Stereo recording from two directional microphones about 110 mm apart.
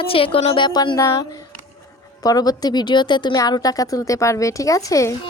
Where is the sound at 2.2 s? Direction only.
35° left (ahead or behind).